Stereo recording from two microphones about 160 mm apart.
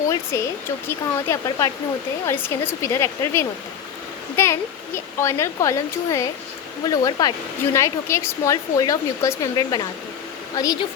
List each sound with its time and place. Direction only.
0.3 s speech: 15° left (ahead or behind)